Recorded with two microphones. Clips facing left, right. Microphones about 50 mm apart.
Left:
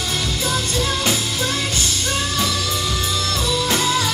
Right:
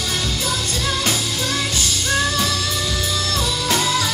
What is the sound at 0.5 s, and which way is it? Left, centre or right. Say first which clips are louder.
Music: left 4 dB; left.